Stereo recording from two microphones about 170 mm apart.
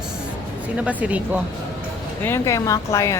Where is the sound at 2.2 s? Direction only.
15° left (ahead or behind).